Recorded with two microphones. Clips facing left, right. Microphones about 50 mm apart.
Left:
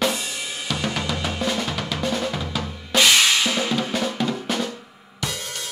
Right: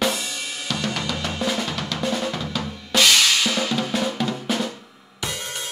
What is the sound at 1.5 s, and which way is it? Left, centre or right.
Drum, centre.